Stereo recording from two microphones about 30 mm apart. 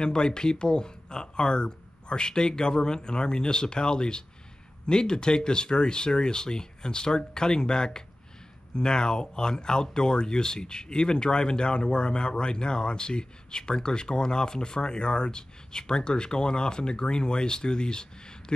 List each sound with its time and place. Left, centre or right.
0.0 s speech: left